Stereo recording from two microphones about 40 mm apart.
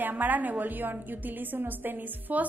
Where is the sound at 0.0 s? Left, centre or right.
Right.